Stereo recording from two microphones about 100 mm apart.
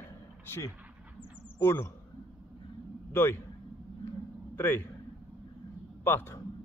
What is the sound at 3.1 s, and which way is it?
Speech, 25° left (ahead or behind).